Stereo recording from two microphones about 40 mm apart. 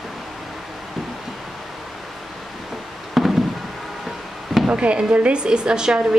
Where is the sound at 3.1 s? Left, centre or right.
Centre.